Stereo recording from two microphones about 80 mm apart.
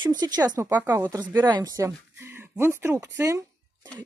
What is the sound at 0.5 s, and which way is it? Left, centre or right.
Speech, right.